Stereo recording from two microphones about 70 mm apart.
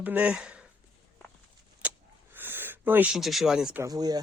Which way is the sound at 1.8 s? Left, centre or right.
Right.